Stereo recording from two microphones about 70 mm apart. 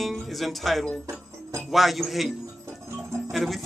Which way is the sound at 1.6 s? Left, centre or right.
Centre.